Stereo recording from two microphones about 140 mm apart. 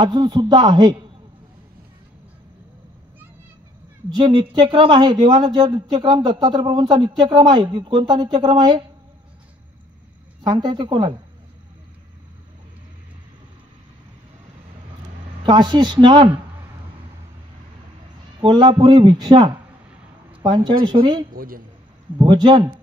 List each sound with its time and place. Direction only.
0.0 s speech: 35° right (ahead or behind)
4.1 s speech: 35° right (ahead or behind)
10.4 s speech: 30° right (ahead or behind)
15.4 s speech: 35° right (ahead or behind)
18.4 s speech: 35° right (ahead or behind)
21.4 s a man's voice: 90° right
22.2 s speech: 35° right (ahead or behind)